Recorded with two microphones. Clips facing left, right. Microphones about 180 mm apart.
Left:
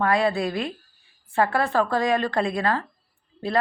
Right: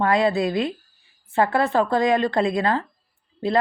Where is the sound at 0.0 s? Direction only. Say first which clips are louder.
Right 2 dB; 20° right (ahead or behind).